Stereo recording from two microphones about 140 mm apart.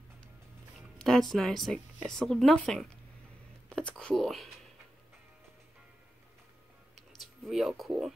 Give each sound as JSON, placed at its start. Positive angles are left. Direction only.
{"t": 0.7, "sound": "speech", "side_deg": 5}
{"t": 3.6, "sound": "whispering", "side_deg": 5}
{"t": 7.0, "sound": "a sound", "side_deg": 0}